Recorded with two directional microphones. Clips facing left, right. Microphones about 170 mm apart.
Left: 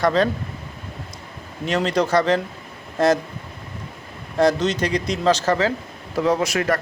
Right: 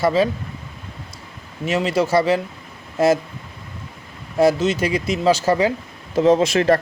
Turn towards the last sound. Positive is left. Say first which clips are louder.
# right 5 dB
turn(degrees=-30)  # may be behind; listen again after turning